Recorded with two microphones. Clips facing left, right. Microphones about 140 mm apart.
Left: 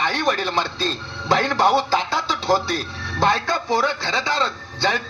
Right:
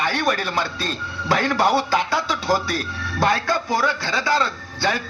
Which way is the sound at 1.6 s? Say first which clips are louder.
Left 1 dB; centre (ahead or behind).